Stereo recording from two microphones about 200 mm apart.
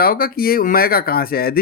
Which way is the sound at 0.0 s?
45° left (ahead or behind).